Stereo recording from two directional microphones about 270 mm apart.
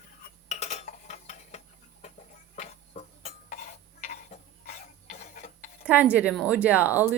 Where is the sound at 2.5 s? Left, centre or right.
Left.